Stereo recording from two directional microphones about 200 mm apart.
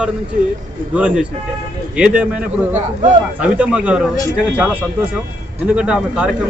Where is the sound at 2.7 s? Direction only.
35° right (ahead or behind).